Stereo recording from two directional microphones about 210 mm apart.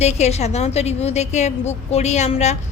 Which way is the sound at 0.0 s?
30° left (ahead or behind).